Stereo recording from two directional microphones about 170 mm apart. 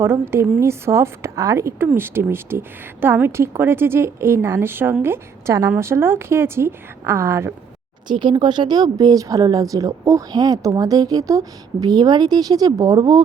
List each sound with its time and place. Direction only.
0.0 s a woman's voice: 15° right (ahead or behind)
8.2 s speech: 25° right (ahead or behind)